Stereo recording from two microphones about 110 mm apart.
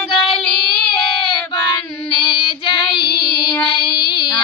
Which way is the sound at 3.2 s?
10° left (ahead or behind).